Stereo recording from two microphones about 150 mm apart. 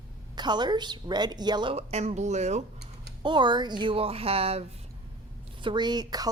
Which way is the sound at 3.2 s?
30° right (ahead or behind).